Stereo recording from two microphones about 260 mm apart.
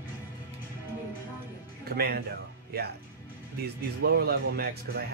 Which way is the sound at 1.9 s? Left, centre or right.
Right.